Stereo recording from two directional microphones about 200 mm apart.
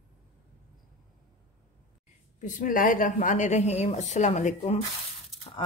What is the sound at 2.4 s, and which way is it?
A woman's voice, 40° left (ahead or behind).